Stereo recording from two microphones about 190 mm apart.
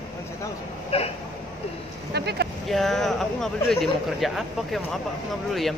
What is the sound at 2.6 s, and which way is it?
Speech, centre (ahead or behind).